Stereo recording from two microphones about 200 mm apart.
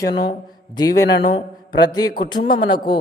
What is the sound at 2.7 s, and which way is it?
Speech, 25° left (ahead or behind).